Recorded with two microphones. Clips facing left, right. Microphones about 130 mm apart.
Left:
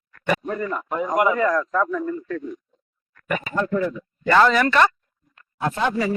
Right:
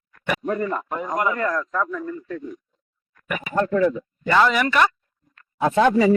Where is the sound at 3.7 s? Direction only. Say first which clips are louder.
Right 5 dB; 90° right.